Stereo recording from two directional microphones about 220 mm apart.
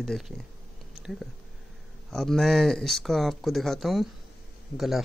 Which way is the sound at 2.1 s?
Centre (ahead or behind).